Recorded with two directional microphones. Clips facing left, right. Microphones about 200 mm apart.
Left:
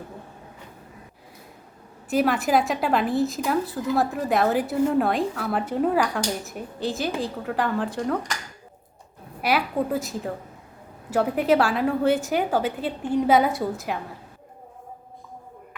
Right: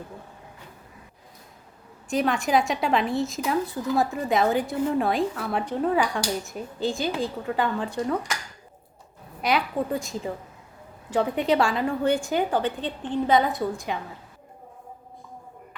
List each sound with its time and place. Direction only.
2.0 s a woman's voice: 5° left (ahead or behind)
9.4 s a woman's voice: 5° left (ahead or behind)